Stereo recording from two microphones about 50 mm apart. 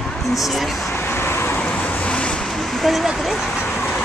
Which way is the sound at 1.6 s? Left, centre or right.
Left.